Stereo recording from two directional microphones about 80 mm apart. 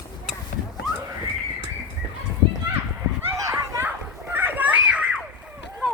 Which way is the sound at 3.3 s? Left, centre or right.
Right.